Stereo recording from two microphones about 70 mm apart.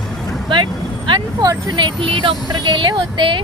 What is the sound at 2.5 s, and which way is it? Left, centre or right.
Speech, right.